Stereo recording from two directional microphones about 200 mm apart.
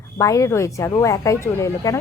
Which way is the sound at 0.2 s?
15° left (ahead or behind).